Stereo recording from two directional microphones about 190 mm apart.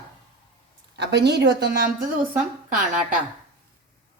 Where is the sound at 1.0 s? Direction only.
65° right (ahead or behind).